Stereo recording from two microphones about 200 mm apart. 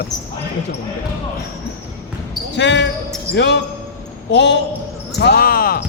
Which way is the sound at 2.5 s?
60° left (ahead or behind).